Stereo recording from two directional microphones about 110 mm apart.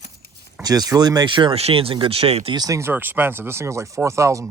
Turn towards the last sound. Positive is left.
turn(degrees=-25)  # may be behind; listen again after turning